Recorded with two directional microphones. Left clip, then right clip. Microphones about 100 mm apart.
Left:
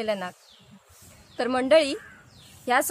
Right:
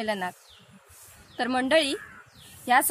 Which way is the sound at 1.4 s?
45° left (ahead or behind).